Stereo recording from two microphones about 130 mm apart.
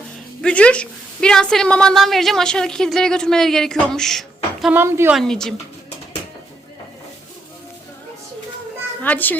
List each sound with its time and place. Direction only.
0.4 s a woman's voice: 10° left (ahead or behind)
4.7 s speech: 20° right (ahead or behind)
5.1 s a woman's voice: 5° left (ahead or behind)
9.0 s a child's voice: 15° left (ahead or behind)